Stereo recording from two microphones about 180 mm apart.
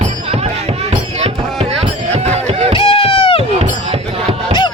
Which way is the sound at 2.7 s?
30° left (ahead or behind).